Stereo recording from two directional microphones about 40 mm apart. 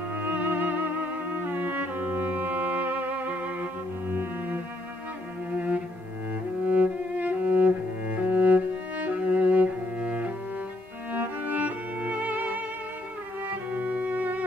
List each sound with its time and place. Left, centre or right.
0.1 s music: right
4.1 s cello: right
5.5 s cello: right
6.7 s music: right
13.7 s music: right